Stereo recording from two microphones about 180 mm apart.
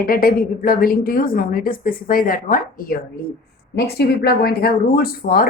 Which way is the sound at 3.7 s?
60° left (ahead or behind).